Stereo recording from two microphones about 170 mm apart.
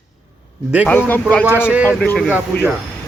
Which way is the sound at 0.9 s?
10° left (ahead or behind).